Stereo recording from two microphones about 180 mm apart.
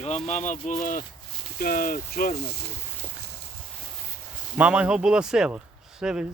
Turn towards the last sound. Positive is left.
turn(degrees=-5)  # may be behind; listen again after turning